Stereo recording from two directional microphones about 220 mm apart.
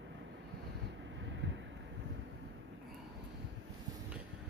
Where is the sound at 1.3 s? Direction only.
55° right (ahead or behind).